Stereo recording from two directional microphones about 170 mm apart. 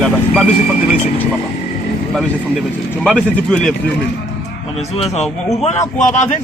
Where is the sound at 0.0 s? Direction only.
5° left (ahead or behind).